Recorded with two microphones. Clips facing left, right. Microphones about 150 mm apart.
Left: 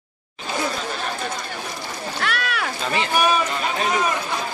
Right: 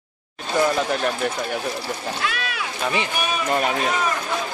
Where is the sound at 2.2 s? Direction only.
65° left (ahead or behind).